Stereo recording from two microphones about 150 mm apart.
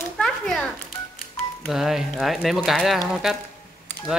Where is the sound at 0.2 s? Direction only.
5° left (ahead or behind).